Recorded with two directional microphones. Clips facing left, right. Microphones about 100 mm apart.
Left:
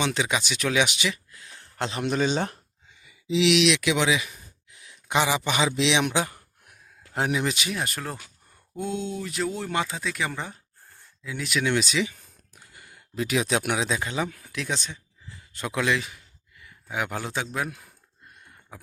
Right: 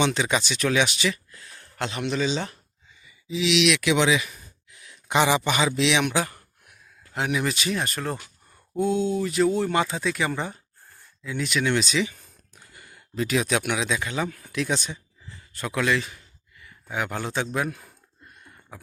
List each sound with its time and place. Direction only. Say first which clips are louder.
0.0 s speech: right 3 dB; 5° left (ahead or behind); by 2.0 s 30° left (ahead or behind)
2.0 s a man's voice: left 2 dB; 50° left (ahead or behind)
2.9 s a sound: left 6 dB; 70° left (ahead or behind)
3.9 s speech: right 2 dB; 5° left (ahead or behind); by 6.2 s 25° left (ahead or behind)
7.1 s speech: left 1 dB; 35° left (ahead or behind)
7.3 s speech: right 1 dB; 15° left (ahead or behind)
12.5 s a sound: right 1 dB; 10° left (ahead or behind)
13.7 s speech: even; 30° left (ahead or behind)
14.2 s speech: right 2 dB; 5° left (ahead or behind)
15.5 s speech: right 1 dB; 15° left (ahead or behind); by 17.8 s centre (ahead or behind)